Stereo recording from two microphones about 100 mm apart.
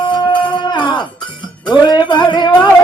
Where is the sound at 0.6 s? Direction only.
45° left (ahead or behind).